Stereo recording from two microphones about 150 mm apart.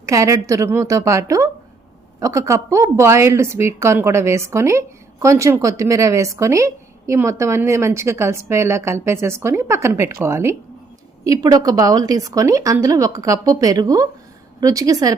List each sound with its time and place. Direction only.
0.0 s speech: 20° right (ahead or behind)